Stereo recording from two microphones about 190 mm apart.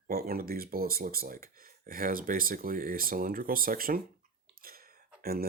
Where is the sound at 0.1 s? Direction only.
50° right (ahead or behind).